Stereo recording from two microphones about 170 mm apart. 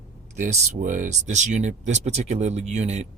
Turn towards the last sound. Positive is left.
turn(degrees=-40)  # may be behind; listen again after turning